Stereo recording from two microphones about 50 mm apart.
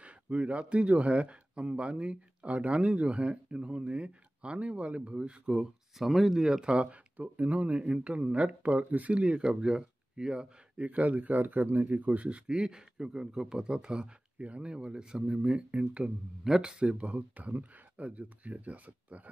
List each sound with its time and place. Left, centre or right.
0.0 s speech: right
5.5 s speech: centre
6.4 s speech: centre
10.9 s speech: right
12.4 s a man's voice: centre; by 19.3 s right